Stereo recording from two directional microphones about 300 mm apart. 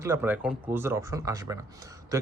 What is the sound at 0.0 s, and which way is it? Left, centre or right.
Speech, centre.